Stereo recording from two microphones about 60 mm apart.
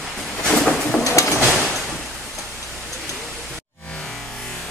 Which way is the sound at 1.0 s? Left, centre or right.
Left.